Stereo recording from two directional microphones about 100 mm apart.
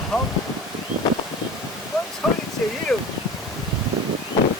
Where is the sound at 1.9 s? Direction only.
Centre (ahead or behind).